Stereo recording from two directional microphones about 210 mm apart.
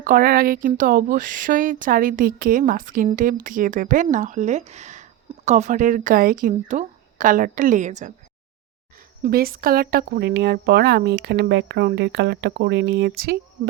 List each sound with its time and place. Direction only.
0.0 s speech: 40° right (ahead or behind)
9.2 s speech: 45° right (ahead or behind)